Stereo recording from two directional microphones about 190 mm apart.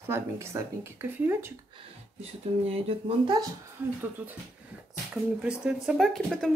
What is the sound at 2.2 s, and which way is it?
Speech, 30° right (ahead or behind).